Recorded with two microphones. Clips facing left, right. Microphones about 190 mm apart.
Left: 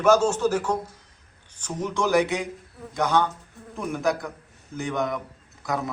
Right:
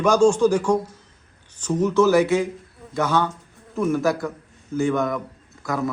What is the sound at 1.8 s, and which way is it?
Speech, 15° left (ahead or behind).